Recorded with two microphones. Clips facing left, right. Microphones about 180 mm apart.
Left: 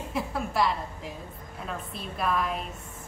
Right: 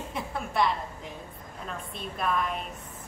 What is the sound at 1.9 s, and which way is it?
Speech, centre (ahead or behind).